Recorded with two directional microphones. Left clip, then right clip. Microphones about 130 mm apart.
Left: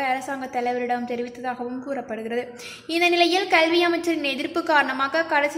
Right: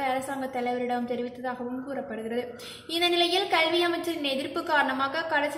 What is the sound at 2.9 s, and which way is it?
A woman's voice, 65° left (ahead or behind).